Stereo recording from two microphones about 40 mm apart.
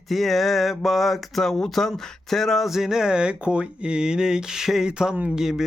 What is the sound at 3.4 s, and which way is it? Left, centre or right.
Speech, right.